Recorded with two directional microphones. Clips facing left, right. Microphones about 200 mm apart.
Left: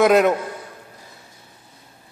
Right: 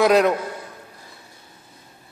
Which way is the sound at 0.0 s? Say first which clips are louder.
Left 1 dB; centre (ahead or behind).